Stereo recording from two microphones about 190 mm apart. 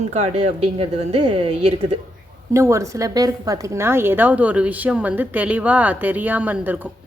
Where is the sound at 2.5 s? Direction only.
15° right (ahead or behind).